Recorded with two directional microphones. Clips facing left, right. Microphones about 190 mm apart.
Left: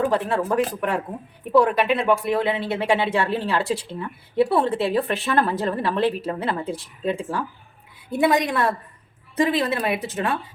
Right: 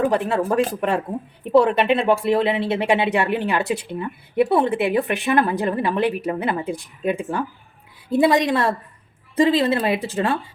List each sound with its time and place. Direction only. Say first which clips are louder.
0.0 s speech: right 2 dB; 20° right (ahead or behind)
0.5 s speech: right 3 dB; 25° right (ahead or behind)
8.1 s speech: right 3 dB; 30° right (ahead or behind)